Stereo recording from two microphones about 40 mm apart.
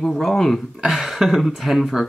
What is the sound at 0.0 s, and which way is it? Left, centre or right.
Speech, centre.